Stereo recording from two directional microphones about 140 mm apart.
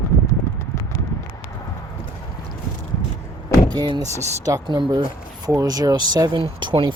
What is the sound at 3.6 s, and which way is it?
Speech, 30° right (ahead or behind).